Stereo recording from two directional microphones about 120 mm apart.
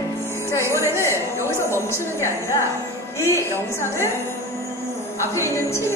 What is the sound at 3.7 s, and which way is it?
Music, 20° left (ahead or behind).